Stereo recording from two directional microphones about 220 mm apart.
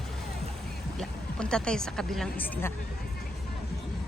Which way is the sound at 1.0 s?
5° left (ahead or behind).